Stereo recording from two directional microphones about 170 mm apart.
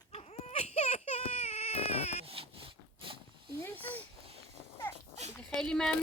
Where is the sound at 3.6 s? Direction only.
10° left (ahead or behind).